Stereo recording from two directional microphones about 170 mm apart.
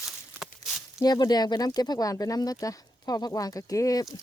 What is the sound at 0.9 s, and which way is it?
Speech, 25° left (ahead or behind).